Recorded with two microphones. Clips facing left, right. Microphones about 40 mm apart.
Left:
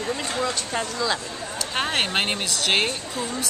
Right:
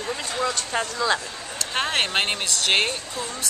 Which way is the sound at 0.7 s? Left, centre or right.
Centre.